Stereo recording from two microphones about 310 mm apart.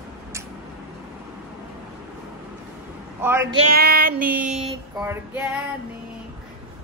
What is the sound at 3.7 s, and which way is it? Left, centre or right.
Child singing, right.